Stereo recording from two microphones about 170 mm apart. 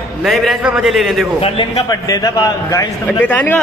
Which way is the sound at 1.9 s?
20° left (ahead or behind).